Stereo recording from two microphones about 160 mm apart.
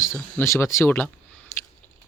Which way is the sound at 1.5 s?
20° left (ahead or behind).